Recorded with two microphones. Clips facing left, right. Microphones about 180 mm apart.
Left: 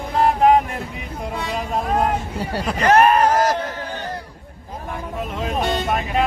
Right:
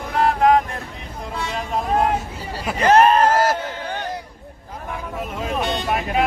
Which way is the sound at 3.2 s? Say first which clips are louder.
Even; 10° right (ahead or behind).